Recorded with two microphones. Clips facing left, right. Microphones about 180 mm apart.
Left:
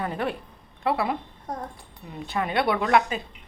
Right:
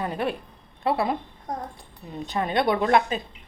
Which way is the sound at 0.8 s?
35° right (ahead or behind).